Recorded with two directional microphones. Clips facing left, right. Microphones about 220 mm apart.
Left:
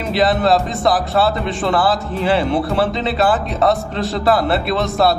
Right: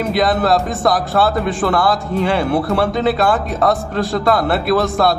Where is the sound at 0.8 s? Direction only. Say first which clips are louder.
Right 1 dB; centre (ahead or behind).